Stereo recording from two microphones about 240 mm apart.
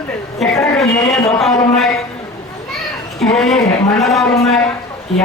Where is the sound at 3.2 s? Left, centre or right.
Centre.